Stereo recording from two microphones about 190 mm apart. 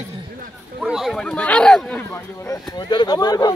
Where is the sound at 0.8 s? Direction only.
Centre (ahead or behind).